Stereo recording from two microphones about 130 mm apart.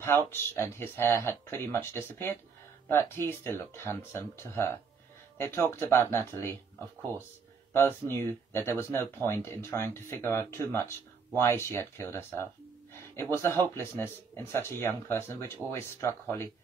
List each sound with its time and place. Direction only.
0.0 s speech: 20° left (ahead or behind)
7.7 s speech: 20° left (ahead or behind)